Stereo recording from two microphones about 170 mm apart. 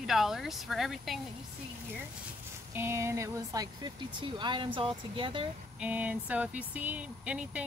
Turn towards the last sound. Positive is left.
turn(degrees=-5)  # may be behind; listen again after turning